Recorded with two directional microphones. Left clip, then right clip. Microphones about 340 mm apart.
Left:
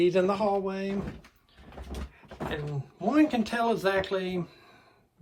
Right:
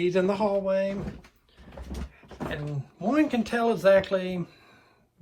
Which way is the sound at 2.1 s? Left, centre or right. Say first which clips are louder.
Even; centre.